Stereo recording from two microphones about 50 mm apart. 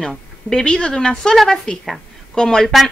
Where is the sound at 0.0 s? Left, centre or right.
Centre.